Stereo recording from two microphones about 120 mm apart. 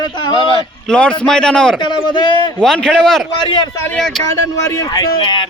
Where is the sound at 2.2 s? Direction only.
40° left (ahead or behind).